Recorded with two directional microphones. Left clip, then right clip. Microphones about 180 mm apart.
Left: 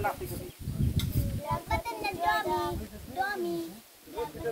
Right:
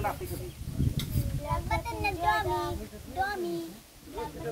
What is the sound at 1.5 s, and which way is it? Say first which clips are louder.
Child singing: even; 40° left (ahead or behind).